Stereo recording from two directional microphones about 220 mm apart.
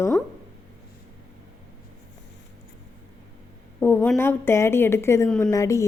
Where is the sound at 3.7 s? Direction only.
10° left (ahead or behind).